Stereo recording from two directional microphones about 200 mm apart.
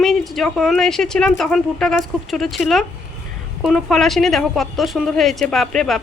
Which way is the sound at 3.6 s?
Centre (ahead or behind).